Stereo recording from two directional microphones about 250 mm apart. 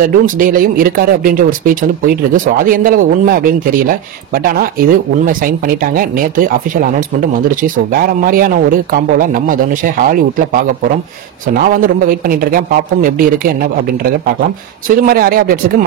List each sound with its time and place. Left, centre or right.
0.0 s speech: right
14.9 s speech: right